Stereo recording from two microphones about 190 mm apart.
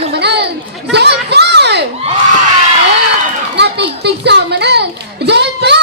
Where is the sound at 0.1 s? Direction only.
60° right (ahead or behind).